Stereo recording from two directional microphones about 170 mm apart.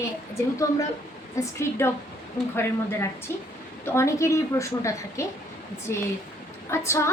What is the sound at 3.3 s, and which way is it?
A woman's voice, 15° left (ahead or behind).